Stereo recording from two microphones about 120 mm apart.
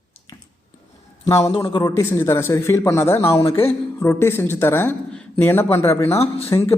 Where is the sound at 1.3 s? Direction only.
25° left (ahead or behind).